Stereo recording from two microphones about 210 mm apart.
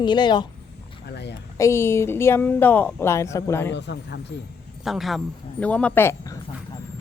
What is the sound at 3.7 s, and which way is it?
Speech, 55° left (ahead or behind).